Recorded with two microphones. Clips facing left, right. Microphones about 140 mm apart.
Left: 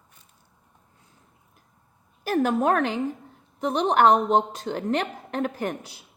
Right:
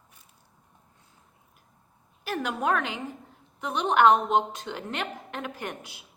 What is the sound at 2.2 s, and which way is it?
A woman's voice, 40° left (ahead or behind).